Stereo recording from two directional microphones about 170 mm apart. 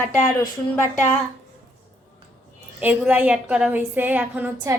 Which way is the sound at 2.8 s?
10° right (ahead or behind).